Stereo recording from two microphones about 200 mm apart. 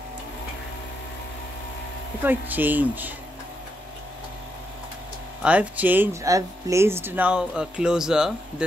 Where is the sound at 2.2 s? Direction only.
10° right (ahead or behind).